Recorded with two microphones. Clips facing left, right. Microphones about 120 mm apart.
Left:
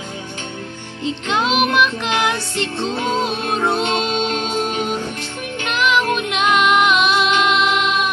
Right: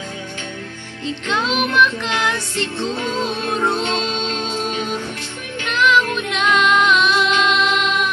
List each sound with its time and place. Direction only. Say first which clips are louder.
1.0 s music: left 2 dB; 20° left (ahead or behind)